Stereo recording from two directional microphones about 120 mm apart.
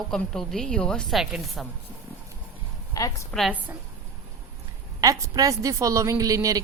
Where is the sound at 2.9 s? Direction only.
30° left (ahead or behind).